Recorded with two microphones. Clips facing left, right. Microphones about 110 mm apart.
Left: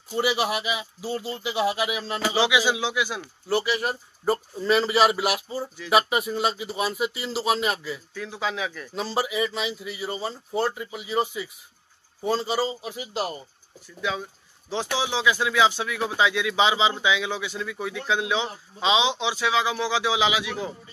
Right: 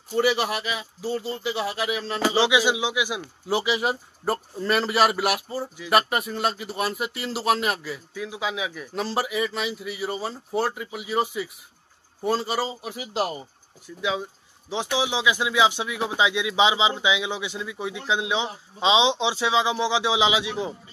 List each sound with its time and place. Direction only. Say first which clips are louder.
0.1 s speech: right 2 dB; 5° left (ahead or behind)
2.1 s speech: right 2 dB; 30° right (ahead or behind); by 13.5 s 5° right (ahead or behind)
14.7 s speech: right 1 dB; 15° right (ahead or behind)